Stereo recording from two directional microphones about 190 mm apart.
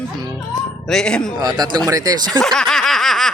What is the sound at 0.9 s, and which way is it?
Speech, 5° left (ahead or behind).